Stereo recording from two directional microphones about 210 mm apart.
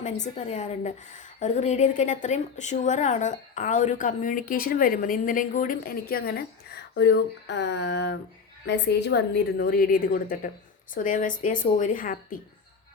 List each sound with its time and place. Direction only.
0.0 s a woman's voice: 35° left (ahead or behind)